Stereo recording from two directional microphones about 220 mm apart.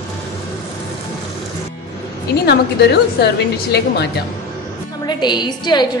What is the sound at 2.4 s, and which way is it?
A woman's voice, 50° left (ahead or behind).